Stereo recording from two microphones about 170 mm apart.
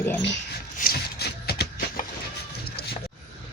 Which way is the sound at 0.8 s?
65° left (ahead or behind).